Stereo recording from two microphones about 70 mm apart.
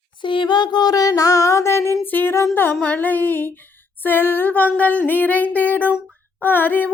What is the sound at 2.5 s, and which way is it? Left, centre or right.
Female singing, left.